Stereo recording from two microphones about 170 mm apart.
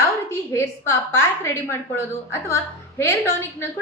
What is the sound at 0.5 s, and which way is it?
A woman's voice, 15° left (ahead or behind).